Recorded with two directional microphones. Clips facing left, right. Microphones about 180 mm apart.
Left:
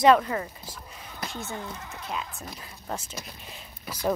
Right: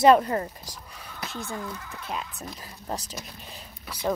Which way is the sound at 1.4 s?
20° left (ahead or behind).